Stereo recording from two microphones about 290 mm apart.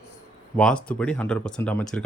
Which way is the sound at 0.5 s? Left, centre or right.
Centre.